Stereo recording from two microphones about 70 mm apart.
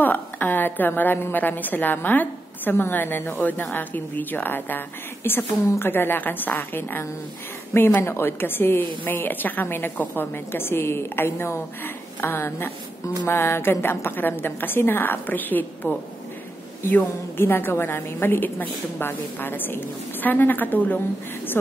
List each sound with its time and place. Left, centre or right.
0.0 s a woman's voice: left